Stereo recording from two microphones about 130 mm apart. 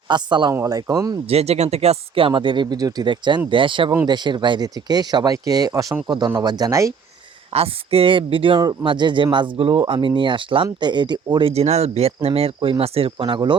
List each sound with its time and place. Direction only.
0.1 s speech: 35° right (ahead or behind)
1.3 s speech: 55° right (ahead or behind); by 6.9 s 25° right (ahead or behind)
7.5 s speech: 50° right (ahead or behind)
11.5 s speech: 55° right (ahead or behind); by 13.6 s 35° right (ahead or behind)